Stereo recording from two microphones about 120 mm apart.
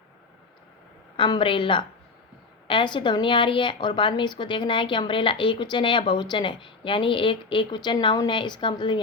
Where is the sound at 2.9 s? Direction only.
40° left (ahead or behind).